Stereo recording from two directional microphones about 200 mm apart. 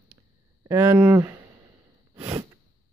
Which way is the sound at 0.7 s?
10° right (ahead or behind).